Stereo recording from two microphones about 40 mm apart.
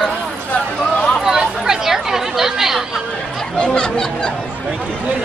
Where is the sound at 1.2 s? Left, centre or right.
Centre.